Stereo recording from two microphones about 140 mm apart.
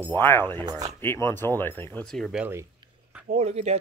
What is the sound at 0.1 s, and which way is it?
Speech, 15° left (ahead or behind).